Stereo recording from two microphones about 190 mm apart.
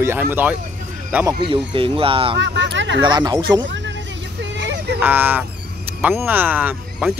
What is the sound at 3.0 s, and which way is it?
Speech, 20° right (ahead or behind).